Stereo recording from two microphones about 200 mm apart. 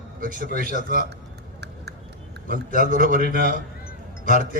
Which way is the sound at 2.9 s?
45° right (ahead or behind).